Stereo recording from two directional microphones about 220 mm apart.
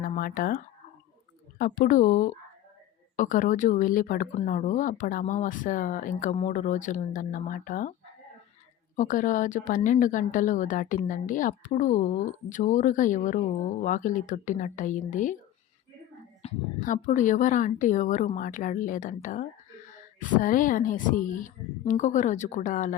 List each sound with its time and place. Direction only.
0.0 s a woman's voice: 40° left (ahead or behind)
9.0 s a woman's voice: 35° left (ahead or behind)
16.4 s a woman's voice: 35° left (ahead or behind)